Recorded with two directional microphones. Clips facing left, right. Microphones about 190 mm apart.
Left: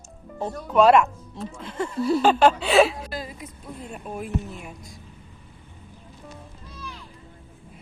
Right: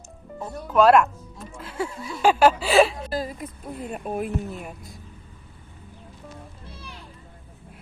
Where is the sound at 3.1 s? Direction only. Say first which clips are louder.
Right 5 dB; 45° right (ahead or behind).